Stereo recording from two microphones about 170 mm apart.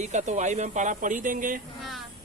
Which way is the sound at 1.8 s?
Centre (ahead or behind).